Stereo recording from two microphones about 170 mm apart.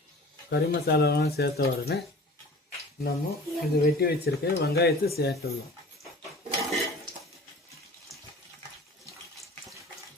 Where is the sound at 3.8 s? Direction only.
65° left (ahead or behind).